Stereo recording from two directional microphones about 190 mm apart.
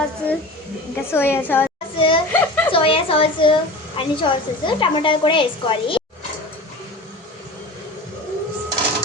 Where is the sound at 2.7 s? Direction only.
30° left (ahead or behind).